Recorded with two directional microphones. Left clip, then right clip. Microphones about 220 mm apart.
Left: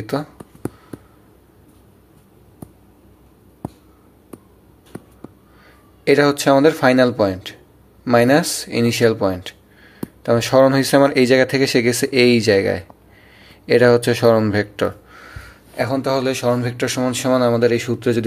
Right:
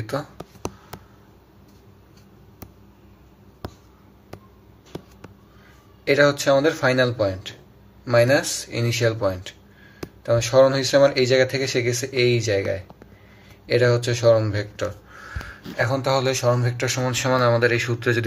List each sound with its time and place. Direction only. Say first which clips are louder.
0.0 s speech: left 4 dB; 30° left (ahead or behind)
6.0 s speech: left 3 dB; 40° left (ahead or behind)